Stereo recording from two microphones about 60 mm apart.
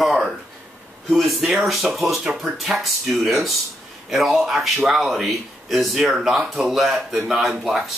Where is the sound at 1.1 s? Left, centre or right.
Centre.